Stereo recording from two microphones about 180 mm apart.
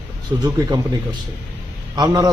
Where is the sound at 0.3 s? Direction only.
20° right (ahead or behind).